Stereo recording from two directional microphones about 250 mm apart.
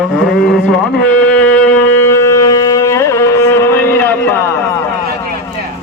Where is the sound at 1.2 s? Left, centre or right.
Centre.